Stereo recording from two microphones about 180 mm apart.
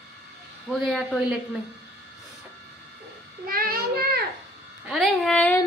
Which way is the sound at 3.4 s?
55° right (ahead or behind).